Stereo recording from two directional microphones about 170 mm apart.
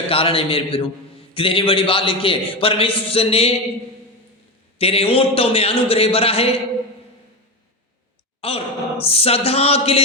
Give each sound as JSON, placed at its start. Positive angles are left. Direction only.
{"t": 0.1, "sound": "a man's voice", "side_deg": 35}
{"t": 4.8, "sound": "a man's voice", "side_deg": 35}
{"t": 8.4, "sound": "a man's voice", "side_deg": 35}